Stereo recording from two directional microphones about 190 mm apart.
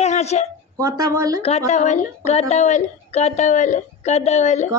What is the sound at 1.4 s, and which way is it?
A woman's voice, 35° left (ahead or behind).